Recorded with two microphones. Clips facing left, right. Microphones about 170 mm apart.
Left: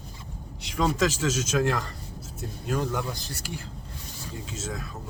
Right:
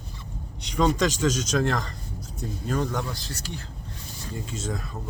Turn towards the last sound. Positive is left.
turn(degrees=0)  # may be behind; listen again after turning